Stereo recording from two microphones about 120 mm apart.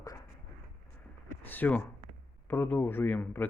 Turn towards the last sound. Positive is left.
turn(degrees=15)  # may be behind; listen again after turning